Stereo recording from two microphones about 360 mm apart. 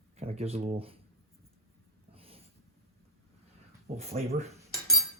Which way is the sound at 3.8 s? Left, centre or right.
Centre.